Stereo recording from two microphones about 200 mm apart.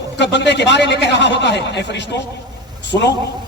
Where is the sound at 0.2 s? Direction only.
60° left (ahead or behind).